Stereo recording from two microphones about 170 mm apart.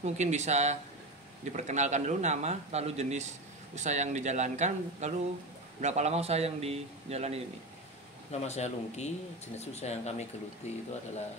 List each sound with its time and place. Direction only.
0.0 s a man's voice: 40° right (ahead or behind)
8.3 s speech: 40° left (ahead or behind)